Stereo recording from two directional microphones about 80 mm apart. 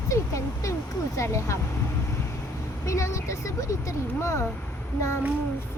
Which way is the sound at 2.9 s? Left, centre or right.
Left.